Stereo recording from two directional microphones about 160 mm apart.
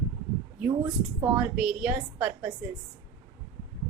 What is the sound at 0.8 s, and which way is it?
Speech, 25° right (ahead or behind).